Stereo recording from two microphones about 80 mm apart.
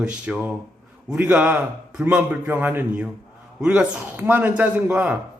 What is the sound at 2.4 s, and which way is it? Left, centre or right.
Speech, right.